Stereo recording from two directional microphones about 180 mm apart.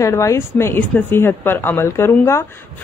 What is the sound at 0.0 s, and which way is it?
A woman's voice, 15° left (ahead or behind).